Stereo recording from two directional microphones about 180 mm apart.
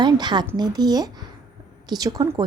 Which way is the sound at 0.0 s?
25° right (ahead or behind).